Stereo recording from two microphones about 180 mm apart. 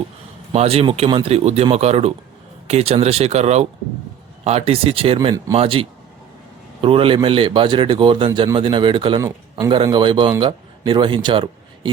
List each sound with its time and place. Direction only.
0.5 s a man's voice: 35° right (ahead or behind)